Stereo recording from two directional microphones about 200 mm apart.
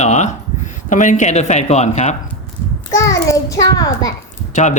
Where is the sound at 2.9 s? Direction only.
15° left (ahead or behind).